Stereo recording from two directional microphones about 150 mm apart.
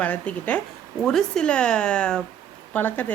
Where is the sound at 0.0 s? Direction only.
10° left (ahead or behind).